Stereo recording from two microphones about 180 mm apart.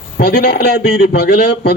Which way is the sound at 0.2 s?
60° left (ahead or behind).